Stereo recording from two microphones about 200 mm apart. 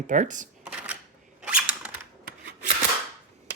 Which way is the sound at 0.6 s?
5° right (ahead or behind).